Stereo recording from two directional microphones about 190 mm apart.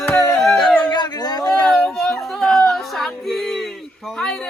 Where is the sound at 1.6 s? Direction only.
5° left (ahead or behind).